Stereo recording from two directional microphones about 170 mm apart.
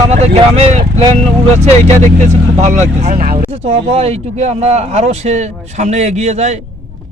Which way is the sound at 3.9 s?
35° right (ahead or behind).